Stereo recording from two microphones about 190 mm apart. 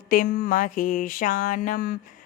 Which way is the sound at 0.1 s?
45° left (ahead or behind).